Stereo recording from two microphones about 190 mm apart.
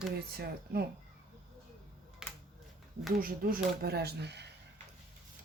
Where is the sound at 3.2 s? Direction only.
50° right (ahead or behind).